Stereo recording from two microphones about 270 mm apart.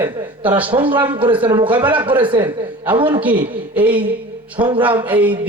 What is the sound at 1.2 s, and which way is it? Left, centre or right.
Speech, centre.